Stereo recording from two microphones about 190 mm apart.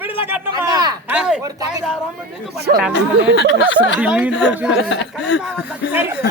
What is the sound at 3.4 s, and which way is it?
Speech, 65° left (ahead or behind).